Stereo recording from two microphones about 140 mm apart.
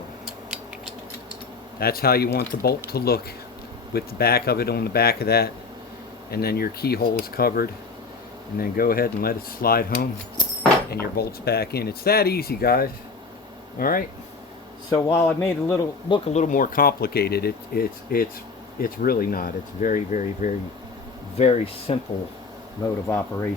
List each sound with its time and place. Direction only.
1.8 s speech: 90° left
11.2 s speech: 90° left
14.8 s a man's voice: 25° left (ahead or behind)
16.0 s speech: 35° left (ahead or behind)
16.3 s speech: 65° left (ahead or behind)
21.3 s speech: 50° left (ahead or behind)
22.8 s a man's voice: 20° left (ahead or behind)